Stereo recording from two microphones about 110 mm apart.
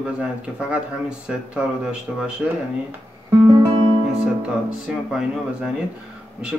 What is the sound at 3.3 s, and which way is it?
Music, 30° right (ahead or behind).